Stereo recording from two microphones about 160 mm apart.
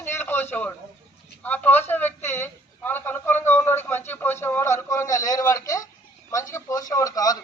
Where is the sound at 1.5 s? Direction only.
10° left (ahead or behind).